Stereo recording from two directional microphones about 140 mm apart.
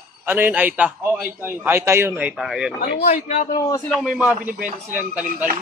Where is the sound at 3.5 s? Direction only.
25° left (ahead or behind).